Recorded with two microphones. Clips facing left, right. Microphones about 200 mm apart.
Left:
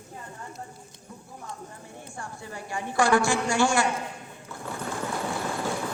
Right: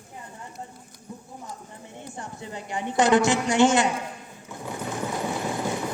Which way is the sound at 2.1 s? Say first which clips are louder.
Right 2 dB; 20° right (ahead or behind).